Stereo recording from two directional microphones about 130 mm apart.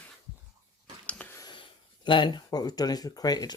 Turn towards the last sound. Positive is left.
turn(degrees=30)  # may be behind; listen again after turning